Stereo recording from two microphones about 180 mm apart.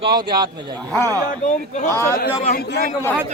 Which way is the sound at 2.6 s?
60° left (ahead or behind).